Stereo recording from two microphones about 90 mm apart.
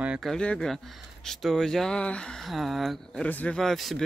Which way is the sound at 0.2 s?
10° left (ahead or behind).